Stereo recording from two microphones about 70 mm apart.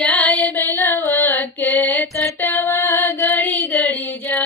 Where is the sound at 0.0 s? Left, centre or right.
Left.